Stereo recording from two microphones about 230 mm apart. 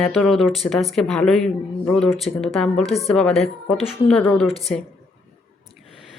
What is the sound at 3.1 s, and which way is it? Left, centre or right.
Speech, centre.